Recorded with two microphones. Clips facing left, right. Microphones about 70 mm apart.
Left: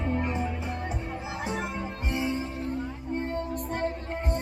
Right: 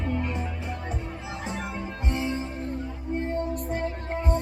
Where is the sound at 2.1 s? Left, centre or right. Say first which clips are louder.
Even; left.